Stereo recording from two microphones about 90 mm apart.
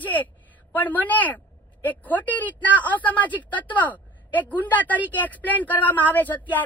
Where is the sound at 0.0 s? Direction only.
20° left (ahead or behind).